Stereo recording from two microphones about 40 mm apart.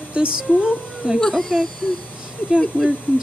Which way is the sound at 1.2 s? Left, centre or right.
Centre.